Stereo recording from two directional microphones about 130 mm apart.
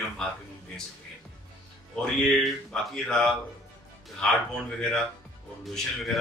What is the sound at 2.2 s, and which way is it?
Speech, centre (ahead or behind).